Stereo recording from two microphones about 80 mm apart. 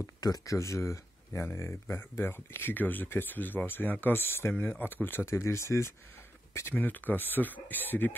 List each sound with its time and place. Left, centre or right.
0.2 s speech: left
6.7 s speech: left